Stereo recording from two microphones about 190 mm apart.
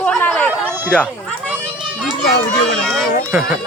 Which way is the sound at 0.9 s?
5° left (ahead or behind).